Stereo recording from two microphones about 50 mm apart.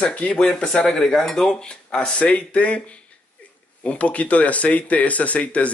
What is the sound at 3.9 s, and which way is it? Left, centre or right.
Speech, left.